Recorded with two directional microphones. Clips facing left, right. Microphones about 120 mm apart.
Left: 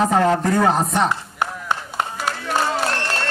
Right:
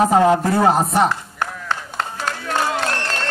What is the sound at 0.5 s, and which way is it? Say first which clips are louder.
Speech: right 2 dB; 30° right (ahead or behind).